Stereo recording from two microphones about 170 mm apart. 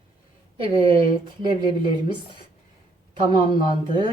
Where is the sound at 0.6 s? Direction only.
30° right (ahead or behind).